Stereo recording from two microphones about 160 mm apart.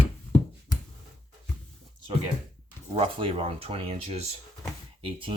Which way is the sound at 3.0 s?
35° right (ahead or behind).